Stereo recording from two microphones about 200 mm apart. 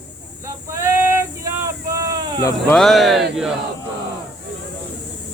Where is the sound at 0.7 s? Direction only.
15° right (ahead or behind).